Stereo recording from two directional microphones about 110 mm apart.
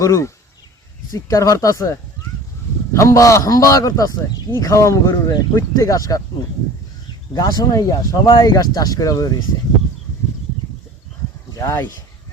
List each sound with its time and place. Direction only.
0.0 s a man's voice: 30° left (ahead or behind)
7.3 s a man's voice: 35° left (ahead or behind)
11.5 s speech: 25° left (ahead or behind)